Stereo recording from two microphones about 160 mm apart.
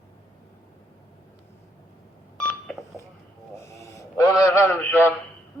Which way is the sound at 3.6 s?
20° left (ahead or behind).